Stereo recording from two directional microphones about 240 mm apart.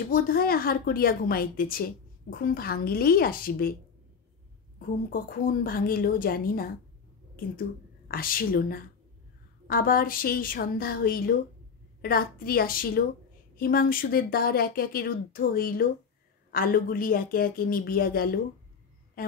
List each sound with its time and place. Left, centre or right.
0.1 s a woman's voice: left
4.7 s a woman's voice: left
8.1 s a woman's voice: left